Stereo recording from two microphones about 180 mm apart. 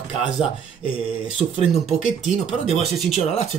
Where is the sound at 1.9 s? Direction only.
Centre (ahead or behind).